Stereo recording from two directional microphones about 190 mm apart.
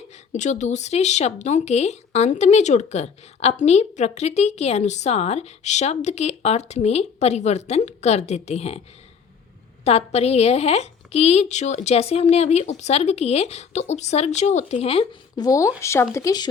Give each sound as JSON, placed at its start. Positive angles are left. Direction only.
{"t": 0.3, "sound": "speech", "side_deg": 40}
{"t": 9.8, "sound": "speech", "side_deg": 35}
{"t": 15.4, "sound": "speech", "side_deg": 15}